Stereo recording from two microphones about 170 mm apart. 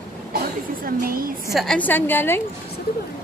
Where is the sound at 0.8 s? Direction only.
60° right (ahead or behind).